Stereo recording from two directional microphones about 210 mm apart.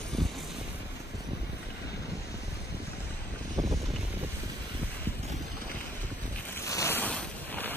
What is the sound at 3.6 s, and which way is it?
Boat, 15° right (ahead or behind).